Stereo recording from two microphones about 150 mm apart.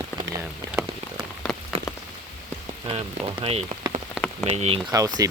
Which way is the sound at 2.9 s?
35° right (ahead or behind).